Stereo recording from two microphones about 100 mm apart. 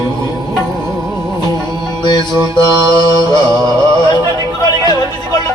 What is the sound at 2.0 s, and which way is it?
Music, 45° left (ahead or behind).